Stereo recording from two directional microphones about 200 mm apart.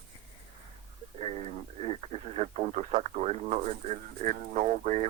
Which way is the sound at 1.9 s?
30° right (ahead or behind).